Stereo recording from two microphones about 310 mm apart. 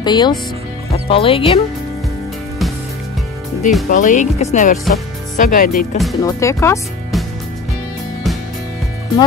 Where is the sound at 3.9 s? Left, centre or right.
Left.